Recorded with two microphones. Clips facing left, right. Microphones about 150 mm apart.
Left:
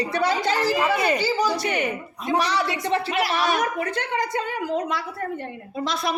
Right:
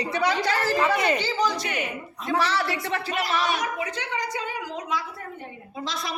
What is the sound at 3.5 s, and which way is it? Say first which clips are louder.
A woman's voice: left 4 dB; 55° left (ahead or behind).